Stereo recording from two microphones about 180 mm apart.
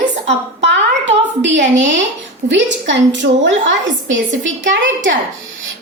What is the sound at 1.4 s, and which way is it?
A woman's voice, 80° right.